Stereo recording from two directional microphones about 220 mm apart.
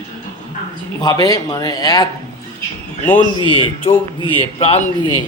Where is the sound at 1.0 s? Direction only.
15° left (ahead or behind).